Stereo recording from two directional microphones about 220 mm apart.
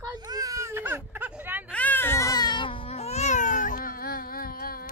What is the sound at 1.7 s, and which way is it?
Baby cry, 5° left (ahead or behind).